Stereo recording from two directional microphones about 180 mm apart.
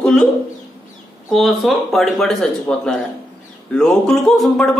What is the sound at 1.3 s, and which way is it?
Speech, centre (ahead or behind).